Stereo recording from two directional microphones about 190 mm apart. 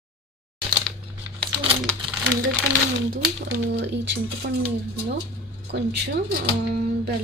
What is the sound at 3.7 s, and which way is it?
Speech, 65° right (ahead or behind).